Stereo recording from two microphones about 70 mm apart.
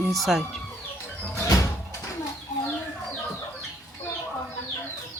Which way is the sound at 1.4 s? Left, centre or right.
Left.